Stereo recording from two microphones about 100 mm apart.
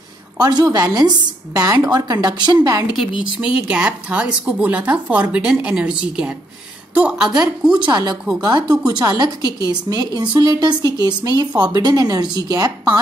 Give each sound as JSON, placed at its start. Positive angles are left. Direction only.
{"t": 0.4, "sound": "a woman's voice", "side_deg": -40}
{"t": 3.0, "sound": "a woman's voice", "side_deg": -10}
{"t": 7.8, "sound": "a woman's voice", "side_deg": -45}